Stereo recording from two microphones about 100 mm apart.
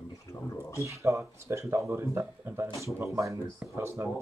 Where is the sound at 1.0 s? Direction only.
30° right (ahead or behind).